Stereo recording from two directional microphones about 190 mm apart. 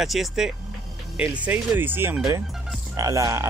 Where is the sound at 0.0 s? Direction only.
Centre (ahead or behind).